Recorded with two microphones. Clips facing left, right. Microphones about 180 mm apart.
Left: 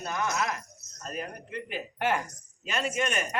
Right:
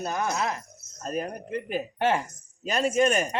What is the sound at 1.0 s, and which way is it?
Speech, 45° right (ahead or behind).